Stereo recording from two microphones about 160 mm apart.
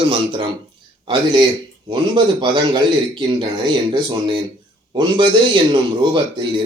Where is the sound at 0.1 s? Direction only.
30° right (ahead or behind).